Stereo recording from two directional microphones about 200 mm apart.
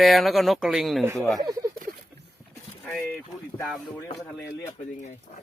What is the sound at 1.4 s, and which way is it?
Speech, 15° right (ahead or behind).